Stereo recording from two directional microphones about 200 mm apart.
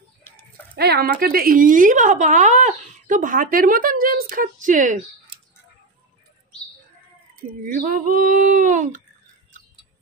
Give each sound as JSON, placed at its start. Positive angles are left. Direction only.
{"t": 0.3, "sound": "a sound", "side_deg": 10}
{"t": 0.7, "sound": "speech", "side_deg": -50}
{"t": 7.6, "sound": "speech", "side_deg": -45}